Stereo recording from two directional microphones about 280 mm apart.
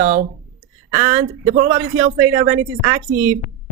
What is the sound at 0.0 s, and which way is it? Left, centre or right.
Speech, right.